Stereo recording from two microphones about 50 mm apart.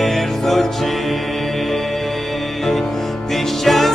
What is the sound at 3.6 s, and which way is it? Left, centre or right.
Music, centre.